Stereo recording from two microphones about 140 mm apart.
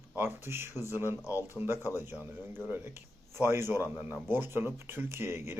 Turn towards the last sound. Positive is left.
turn(degrees=-15)  # may be behind; listen again after turning